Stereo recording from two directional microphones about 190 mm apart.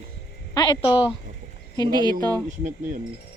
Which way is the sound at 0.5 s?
25° left (ahead or behind).